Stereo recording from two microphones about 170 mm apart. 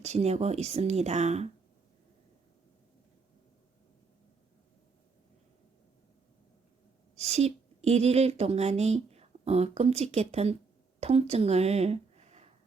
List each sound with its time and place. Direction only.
0.0 s speech: 40° right (ahead or behind)
7.2 s a woman's voice: 40° right (ahead or behind)